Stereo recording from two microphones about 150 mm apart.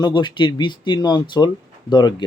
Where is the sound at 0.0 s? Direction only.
30° left (ahead or behind).